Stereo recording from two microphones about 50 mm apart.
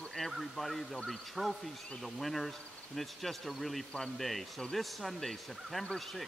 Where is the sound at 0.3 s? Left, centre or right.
Centre.